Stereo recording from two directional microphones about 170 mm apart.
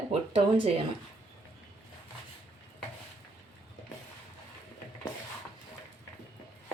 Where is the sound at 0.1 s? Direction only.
35° right (ahead or behind).